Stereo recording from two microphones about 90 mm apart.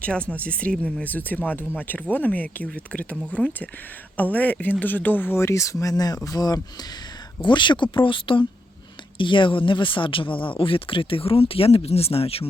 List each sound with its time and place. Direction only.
0.0 s speech: 15° left (ahead or behind); by 6.6 s 45° left (ahead or behind)
7.4 s speech: 60° left (ahead or behind); by 12.5 s 90° left